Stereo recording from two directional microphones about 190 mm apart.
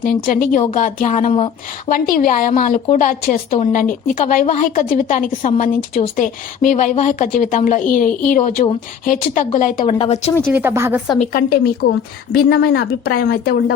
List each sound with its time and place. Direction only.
0.0 s a woman's voice: 45° left (ahead or behind)
10.4 s speech: 10° right (ahead or behind)
11.2 s a woman's voice: 50° left (ahead or behind)